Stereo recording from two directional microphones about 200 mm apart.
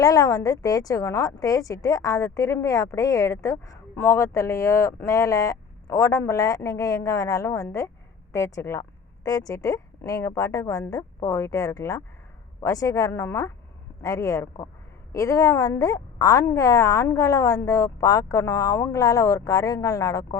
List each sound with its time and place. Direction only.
0.0 s speech: 20° left (ahead or behind)